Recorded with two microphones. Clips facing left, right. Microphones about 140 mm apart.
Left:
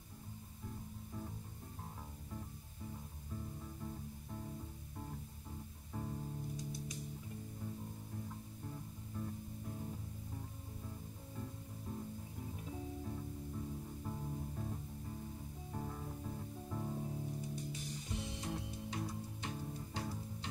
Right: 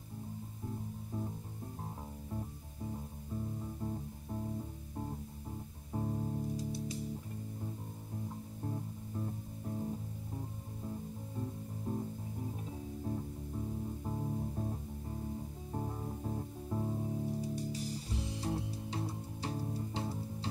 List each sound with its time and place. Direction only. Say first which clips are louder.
2.3 s music: right 6 dB; 35° right (ahead or behind)
5.9 s music: right 7 dB; 35° right (ahead or behind)
8.3 s music: right 7 dB; 35° right (ahead or behind)